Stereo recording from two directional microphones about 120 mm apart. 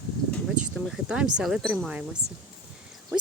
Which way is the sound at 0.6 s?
5° right (ahead or behind).